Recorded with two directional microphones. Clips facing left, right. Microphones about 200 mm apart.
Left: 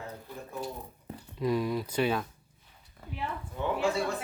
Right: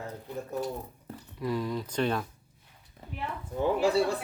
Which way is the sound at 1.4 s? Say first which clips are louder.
Left 2 dB; 15° left (ahead or behind).